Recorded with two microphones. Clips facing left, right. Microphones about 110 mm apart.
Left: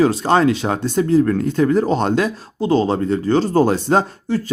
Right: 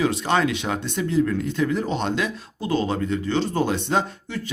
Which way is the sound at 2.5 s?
30° left (ahead or behind).